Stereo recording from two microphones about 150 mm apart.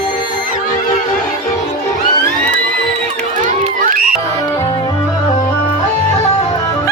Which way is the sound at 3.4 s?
65° right (ahead or behind).